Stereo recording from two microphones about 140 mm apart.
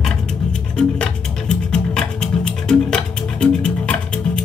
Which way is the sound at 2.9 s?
5° left (ahead or behind).